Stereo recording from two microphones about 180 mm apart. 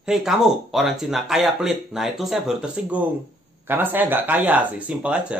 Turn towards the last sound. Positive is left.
turn(degrees=-5)  # may be behind; listen again after turning